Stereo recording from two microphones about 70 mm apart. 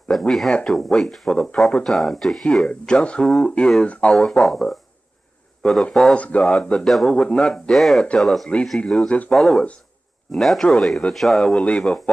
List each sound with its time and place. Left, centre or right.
0.1 s speech: centre
4.2 s speech: centre
6.1 s speech: centre
7.7 s speech: centre